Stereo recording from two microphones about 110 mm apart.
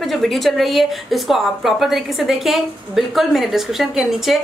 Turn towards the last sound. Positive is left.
turn(degrees=0)  # may be behind; listen again after turning